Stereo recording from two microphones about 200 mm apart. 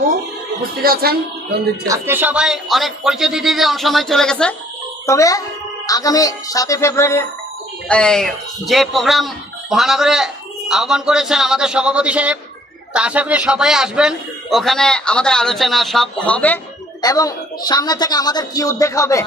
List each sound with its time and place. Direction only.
0.6 s speech: 50° right (ahead or behind)
1.9 s speech: 10° right (ahead or behind)
5.0 s speech: 15° left (ahead or behind)
17.0 s a woman's voice: 20° left (ahead or behind)